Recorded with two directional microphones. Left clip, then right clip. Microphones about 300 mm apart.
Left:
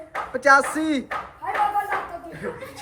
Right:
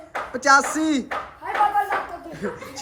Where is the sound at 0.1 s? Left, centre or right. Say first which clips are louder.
Even; centre.